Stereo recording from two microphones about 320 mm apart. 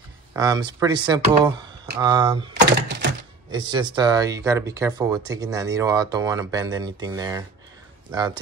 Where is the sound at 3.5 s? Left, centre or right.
Centre.